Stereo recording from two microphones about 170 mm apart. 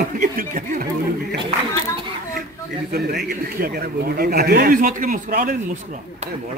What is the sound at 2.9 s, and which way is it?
A man's voice, 60° right (ahead or behind).